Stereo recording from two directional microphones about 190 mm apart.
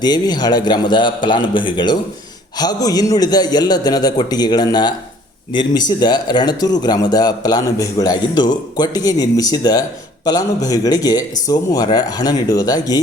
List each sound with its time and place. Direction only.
0.0 s speech: 20° left (ahead or behind)